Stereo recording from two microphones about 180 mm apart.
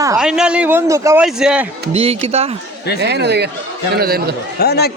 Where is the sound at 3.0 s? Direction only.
70° right (ahead or behind).